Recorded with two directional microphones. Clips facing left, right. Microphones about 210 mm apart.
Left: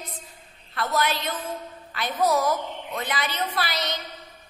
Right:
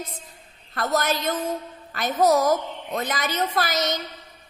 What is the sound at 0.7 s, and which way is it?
A woman's voice, 45° right (ahead or behind).